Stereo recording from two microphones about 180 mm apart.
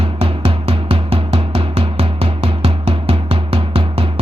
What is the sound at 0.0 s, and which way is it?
Music, 30° right (ahead or behind).